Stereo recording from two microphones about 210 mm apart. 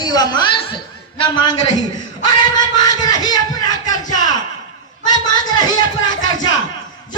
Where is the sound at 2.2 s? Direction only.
20° left (ahead or behind).